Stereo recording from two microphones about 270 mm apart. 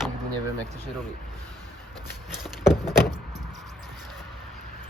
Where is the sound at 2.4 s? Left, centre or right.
Centre.